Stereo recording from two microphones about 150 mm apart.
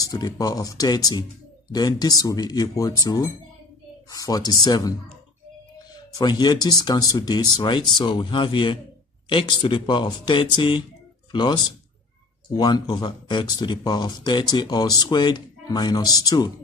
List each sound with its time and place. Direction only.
0.0 s speech: 25° left (ahead or behind)